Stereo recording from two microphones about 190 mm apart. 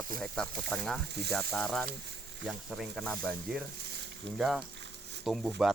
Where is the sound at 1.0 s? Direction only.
60° right (ahead or behind).